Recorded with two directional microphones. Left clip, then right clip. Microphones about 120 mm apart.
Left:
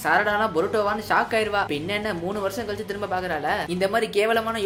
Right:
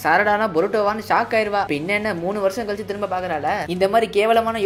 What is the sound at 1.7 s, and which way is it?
Speech, 40° right (ahead or behind).